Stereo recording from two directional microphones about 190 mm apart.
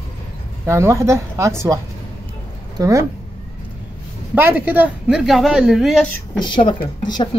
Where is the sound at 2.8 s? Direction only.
15° right (ahead or behind).